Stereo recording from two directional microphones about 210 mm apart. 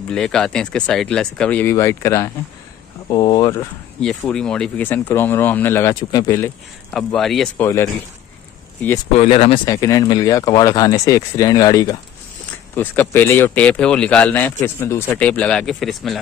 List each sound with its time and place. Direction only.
0.1 s speech: 5° left (ahead or behind)
4.0 s speech: centre (ahead or behind)
6.9 s speech: 5° left (ahead or behind)
7.6 s speech: 15° left (ahead or behind)
9.2 s speech: 30° left (ahead or behind)
9.7 s speech: 15° left (ahead or behind); by 16.2 s centre (ahead or behind)